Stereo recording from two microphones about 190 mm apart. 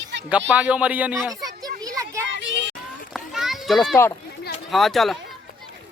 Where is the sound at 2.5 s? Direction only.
70° right (ahead or behind).